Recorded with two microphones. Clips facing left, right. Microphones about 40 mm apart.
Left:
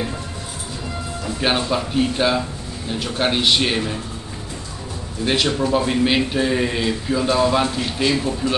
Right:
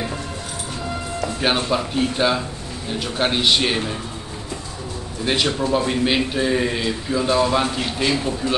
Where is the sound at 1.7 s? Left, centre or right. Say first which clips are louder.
Left 1 dB; centre.